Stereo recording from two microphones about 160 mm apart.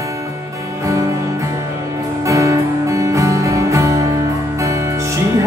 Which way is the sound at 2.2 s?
20° right (ahead or behind).